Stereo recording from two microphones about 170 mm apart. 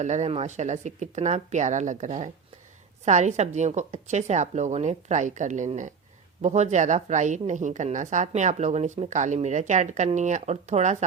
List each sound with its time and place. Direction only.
0.0 s a woman's voice: 45° right (ahead or behind)